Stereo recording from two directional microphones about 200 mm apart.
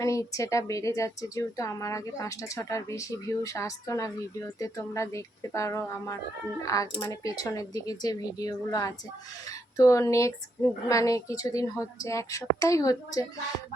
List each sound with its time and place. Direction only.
0.0 s a woman's voice: 15° left (ahead or behind)